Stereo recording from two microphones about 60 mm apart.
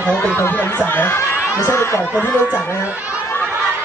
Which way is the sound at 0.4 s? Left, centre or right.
Left.